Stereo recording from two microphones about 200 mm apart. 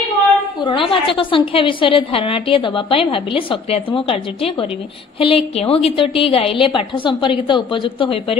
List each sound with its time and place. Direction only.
0.6 s a woman's voice: 25° left (ahead or behind)